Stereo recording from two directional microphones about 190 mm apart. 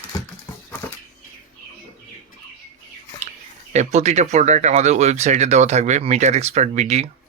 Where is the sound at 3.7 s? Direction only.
35° right (ahead or behind).